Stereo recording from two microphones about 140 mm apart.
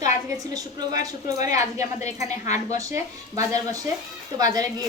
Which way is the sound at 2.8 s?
25° right (ahead or behind).